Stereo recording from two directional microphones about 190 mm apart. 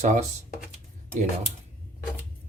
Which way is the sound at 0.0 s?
40° right (ahead or behind).